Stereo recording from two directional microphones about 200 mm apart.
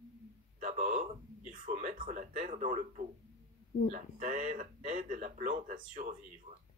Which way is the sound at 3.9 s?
40° right (ahead or behind).